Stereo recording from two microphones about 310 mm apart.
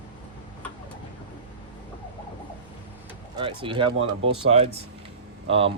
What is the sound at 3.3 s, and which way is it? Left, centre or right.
Speech, centre.